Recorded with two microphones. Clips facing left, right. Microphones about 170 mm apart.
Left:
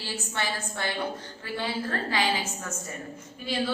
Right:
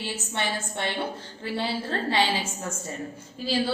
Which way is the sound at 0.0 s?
20° right (ahead or behind).